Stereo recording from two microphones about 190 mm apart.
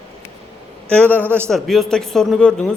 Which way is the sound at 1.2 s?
10° right (ahead or behind).